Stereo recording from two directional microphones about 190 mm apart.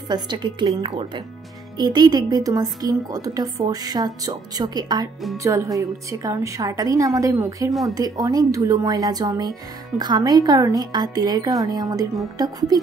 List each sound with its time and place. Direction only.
0.1 s a woman's voice: 25° right (ahead or behind)